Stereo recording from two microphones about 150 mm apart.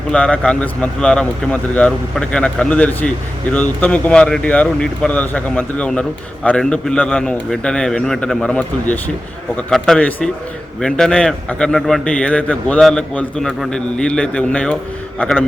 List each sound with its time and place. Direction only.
0.1 s a man's voice: 5° left (ahead or behind)